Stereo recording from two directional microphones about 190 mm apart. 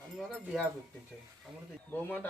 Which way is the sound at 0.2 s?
Centre (ahead or behind).